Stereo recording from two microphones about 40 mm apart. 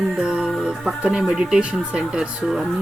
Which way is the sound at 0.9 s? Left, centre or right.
Centre.